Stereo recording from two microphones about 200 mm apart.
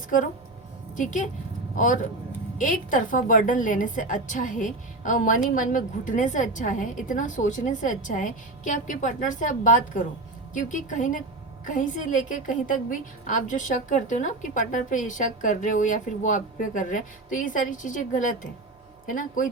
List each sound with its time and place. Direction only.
0.9 s a woman's voice: 40° left (ahead or behind)